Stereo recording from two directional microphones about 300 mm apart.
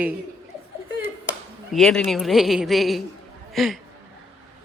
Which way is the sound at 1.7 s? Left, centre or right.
Centre.